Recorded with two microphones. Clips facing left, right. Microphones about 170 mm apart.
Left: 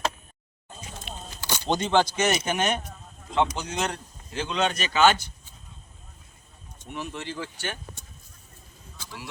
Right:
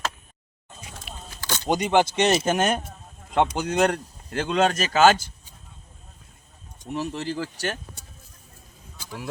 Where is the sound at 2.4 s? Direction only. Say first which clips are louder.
Right 4 dB; 45° right (ahead or behind).